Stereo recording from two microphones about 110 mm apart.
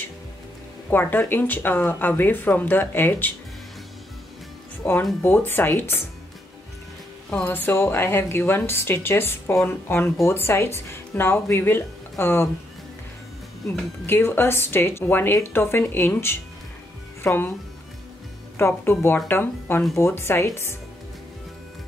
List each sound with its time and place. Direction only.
0.8 s speech: 20° left (ahead or behind)
4.8 s a woman's voice: 10° left (ahead or behind)
7.2 s a woman's voice: 15° left (ahead or behind)
14.0 s a woman's voice: 20° left (ahead or behind)
18.6 s a woman's voice: 20° left (ahead or behind)